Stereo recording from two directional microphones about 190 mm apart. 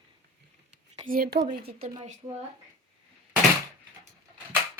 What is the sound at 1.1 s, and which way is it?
Speech, 50° right (ahead or behind).